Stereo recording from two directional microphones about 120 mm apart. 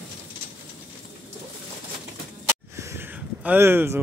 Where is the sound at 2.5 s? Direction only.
20° right (ahead or behind).